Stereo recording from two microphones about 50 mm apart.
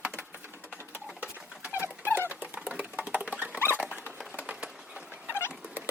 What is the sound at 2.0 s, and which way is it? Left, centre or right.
Dog, left.